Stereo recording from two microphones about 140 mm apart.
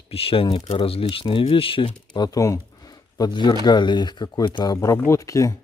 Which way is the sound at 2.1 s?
30° left (ahead or behind).